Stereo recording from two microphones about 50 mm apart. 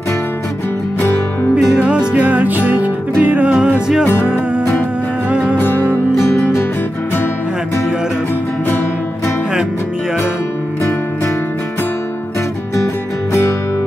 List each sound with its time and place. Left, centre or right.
1.8 s music: right
4.0 s music: left
5.6 s music: left
12.7 s music: left